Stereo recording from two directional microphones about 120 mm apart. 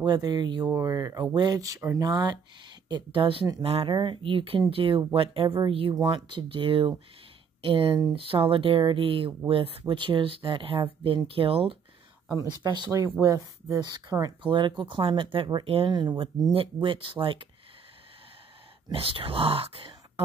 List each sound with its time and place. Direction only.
0.0 s speech: 35° right (ahead or behind)
2.9 s speech: 45° right (ahead or behind)
3.9 s speech: 45° right (ahead or behind)
12.4 s speech: 40° right (ahead or behind)
13.2 s speech: 25° right (ahead or behind)
13.7 s speech: 40° right (ahead or behind)
15.9 s speech: 35° right (ahead or behind)
18.9 s speech: 50° right (ahead or behind)